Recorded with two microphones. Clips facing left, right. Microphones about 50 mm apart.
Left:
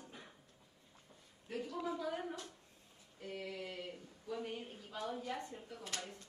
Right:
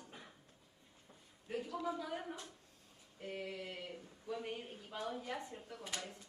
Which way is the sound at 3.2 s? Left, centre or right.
Right.